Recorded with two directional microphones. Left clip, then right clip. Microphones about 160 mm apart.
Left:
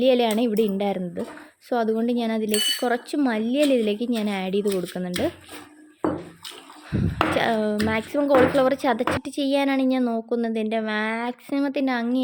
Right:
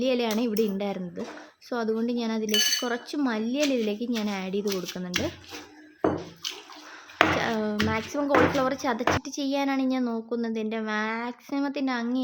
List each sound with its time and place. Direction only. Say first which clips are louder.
0.0 s a woman's voice: left 6 dB; 30° left (ahead or behind)
7.3 s a woman's voice: left 5 dB; 25° left (ahead or behind)